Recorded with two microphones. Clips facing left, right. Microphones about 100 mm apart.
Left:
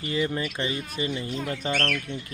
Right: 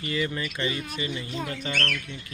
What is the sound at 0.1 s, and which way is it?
Speech, 25° left (ahead or behind).